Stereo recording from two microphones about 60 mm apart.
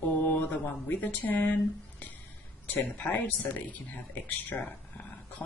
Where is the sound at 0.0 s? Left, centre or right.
Left.